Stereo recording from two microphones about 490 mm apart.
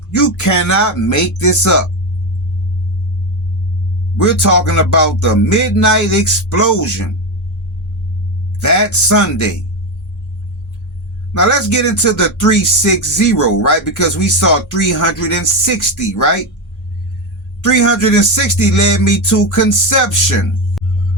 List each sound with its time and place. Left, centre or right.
0.1 s speech: left
4.2 s speech: left
8.5 s speech: left
11.3 s speech: left
17.6 s speech: left
20.8 s music: centre